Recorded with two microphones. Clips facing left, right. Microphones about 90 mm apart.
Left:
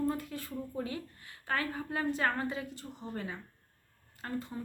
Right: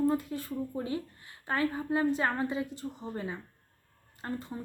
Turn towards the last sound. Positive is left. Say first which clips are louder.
# right 1 dB
turn(degrees=-25)  # may be behind; listen again after turning